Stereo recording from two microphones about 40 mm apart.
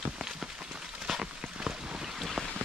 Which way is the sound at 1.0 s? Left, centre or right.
Centre.